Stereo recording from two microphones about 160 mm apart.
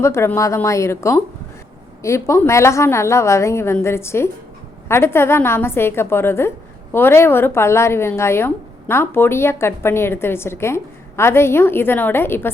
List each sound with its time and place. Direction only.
0.0 s speech: 15° left (ahead or behind)